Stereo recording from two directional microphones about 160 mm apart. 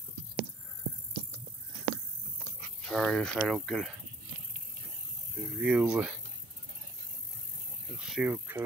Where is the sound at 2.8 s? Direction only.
5° left (ahead or behind).